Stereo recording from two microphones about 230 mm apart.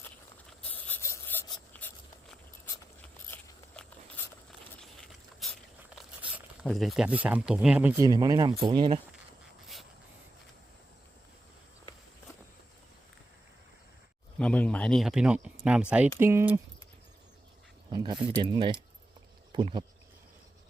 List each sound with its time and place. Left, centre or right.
0.8 s filing: centre
3.0 s biting: centre
4.2 s a sound: centre
5.9 s speech: centre
14.3 s speech: centre
17.9 s speech: centre